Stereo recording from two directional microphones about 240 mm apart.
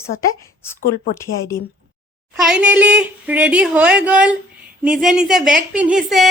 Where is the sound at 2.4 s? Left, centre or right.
Centre.